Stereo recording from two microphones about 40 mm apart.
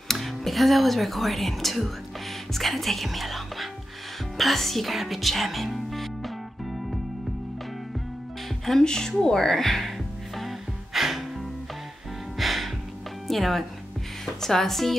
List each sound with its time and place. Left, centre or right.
0.1 s speech: centre
8.6 s speech: centre
9.2 s music: centre
12.4 s music: centre
13.3 s speech: centre